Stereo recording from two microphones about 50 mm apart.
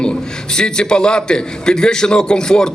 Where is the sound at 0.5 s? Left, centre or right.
Centre.